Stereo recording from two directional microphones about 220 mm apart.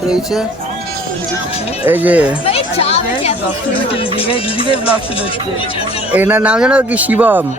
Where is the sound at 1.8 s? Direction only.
5° right (ahead or behind).